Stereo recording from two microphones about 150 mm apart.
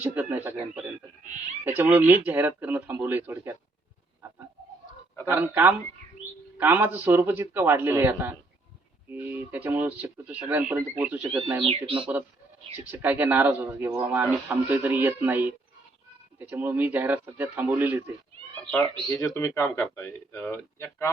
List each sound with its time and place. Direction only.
0.0 s a man's voice: 15° right (ahead or behind)
5.2 s a man's voice: 15° right (ahead or behind)
11.6 s speech: 35° right (ahead or behind)
11.9 s a man's voice: 10° right (ahead or behind)
19.0 s speech: 20° left (ahead or behind)